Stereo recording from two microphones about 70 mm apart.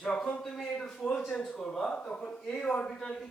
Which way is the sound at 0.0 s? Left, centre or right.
Centre.